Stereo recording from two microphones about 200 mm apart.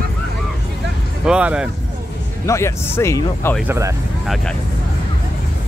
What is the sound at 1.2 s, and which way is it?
Speech, 5° right (ahead or behind).